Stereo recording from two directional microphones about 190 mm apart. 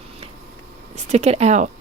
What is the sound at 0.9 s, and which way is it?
Speech, 35° right (ahead or behind).